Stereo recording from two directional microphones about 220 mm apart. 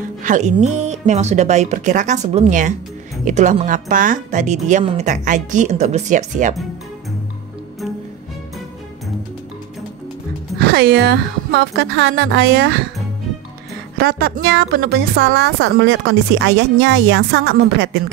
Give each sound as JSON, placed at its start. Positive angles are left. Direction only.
{"t": 0.0, "sound": "speech", "side_deg": -35}
{"t": 10.6, "sound": "a woman's voice", "side_deg": -45}
{"t": 13.9, "sound": "a woman's voice", "side_deg": -45}